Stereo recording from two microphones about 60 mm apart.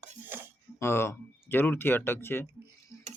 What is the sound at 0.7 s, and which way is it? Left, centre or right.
Speech, left.